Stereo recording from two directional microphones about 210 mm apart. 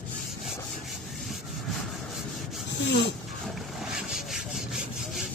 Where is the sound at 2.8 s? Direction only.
55° left (ahead or behind).